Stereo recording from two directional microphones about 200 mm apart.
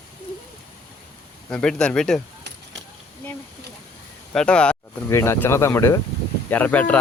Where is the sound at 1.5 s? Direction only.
5° left (ahead or behind).